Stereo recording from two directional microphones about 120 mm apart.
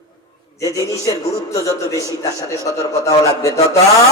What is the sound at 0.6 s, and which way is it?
A man's voice, 25° left (ahead or behind).